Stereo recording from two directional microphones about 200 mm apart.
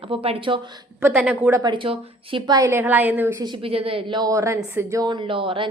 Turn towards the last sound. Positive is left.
turn(degrees=-25)  # may be behind; listen again after turning